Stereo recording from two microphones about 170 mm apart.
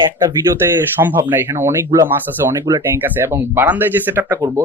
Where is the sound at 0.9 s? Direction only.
10° right (ahead or behind).